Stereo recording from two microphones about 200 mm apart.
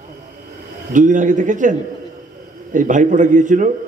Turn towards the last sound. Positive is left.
turn(degrees=-40)  # may be behind; listen again after turning